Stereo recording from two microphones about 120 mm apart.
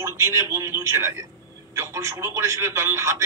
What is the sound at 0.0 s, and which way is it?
A man's voice, 20° right (ahead or behind).